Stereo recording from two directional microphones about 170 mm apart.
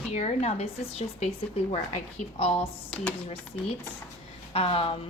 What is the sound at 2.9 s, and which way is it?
Speech, 5° left (ahead or behind).